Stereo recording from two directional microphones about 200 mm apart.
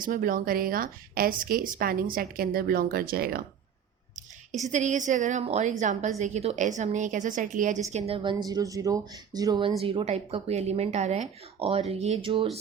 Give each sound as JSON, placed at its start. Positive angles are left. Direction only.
{"t": 0.0, "sound": "a woman's voice", "side_deg": -45}
{"t": 4.1, "sound": "a woman's voice", "side_deg": -35}